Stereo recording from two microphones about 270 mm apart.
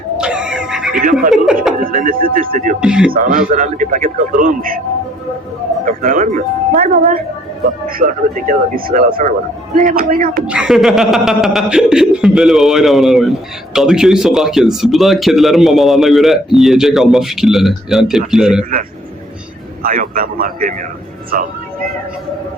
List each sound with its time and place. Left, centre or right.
0.2 s music: centre
1.3 s a man's voice: centre
1.8 s speech: right
2.8 s a man's voice: centre
3.3 s a man's voice: right
5.8 s a man's voice: right
10.4 s a man's voice: centre
19.8 s speech: right